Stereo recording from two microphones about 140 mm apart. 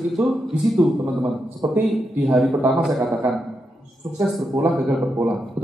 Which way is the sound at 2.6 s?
5° right (ahead or behind).